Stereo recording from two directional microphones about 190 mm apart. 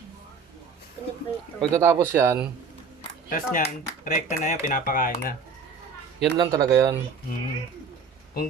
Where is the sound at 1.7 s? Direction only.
10° right (ahead or behind).